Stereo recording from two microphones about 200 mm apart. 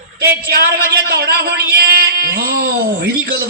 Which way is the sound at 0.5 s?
50° right (ahead or behind).